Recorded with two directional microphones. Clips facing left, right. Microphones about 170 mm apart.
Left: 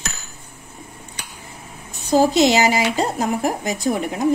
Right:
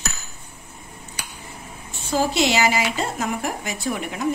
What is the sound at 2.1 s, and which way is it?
Speech, 40° left (ahead or behind).